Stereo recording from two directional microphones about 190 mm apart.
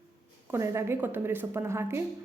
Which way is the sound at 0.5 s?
15° right (ahead or behind).